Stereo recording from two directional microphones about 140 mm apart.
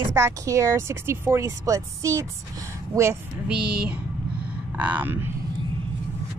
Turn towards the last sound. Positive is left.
turn(degrees=-15)  # may be behind; listen again after turning